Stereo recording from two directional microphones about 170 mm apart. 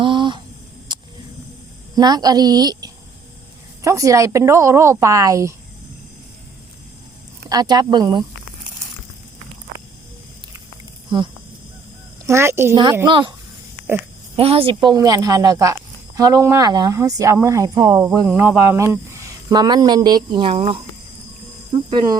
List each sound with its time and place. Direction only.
0.0 s a sound: 30° right (ahead or behind)
2.0 s speech: 25° right (ahead or behind)
7.5 s speech: 25° right (ahead or behind)
11.1 s speech: 25° right (ahead or behind)
12.2 s speech: 15° right (ahead or behind)
12.7 s speech: 25° right (ahead or behind)
14.3 s a woman's voice: 35° right (ahead or behind)
14.8 s speech: 20° right (ahead or behind)